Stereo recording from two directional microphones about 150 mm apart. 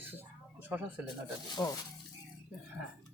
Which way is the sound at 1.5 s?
25° left (ahead or behind).